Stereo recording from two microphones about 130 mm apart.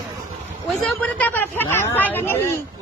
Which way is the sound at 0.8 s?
10° left (ahead or behind).